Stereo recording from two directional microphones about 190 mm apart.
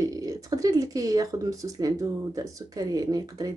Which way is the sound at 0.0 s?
20° right (ahead or behind).